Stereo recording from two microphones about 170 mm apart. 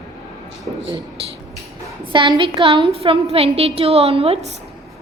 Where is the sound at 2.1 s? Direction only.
30° right (ahead or behind).